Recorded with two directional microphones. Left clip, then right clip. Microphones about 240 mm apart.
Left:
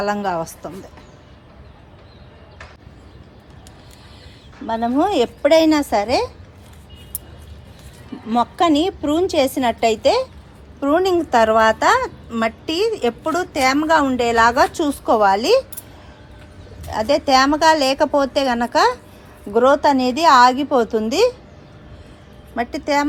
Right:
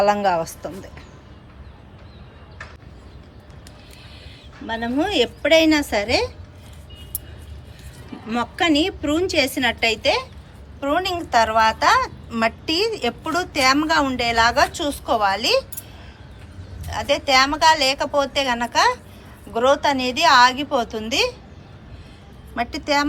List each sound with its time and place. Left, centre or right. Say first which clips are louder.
0.0 s a woman's voice: right 3 dB; centre
4.9 s a woman's voice: left 1 dB; centre
8.3 s a woman's voice: left 4 dB; centre
16.9 s a woman's voice: left 3 dB; centre
22.5 s a woman's voice: left 2 dB; centre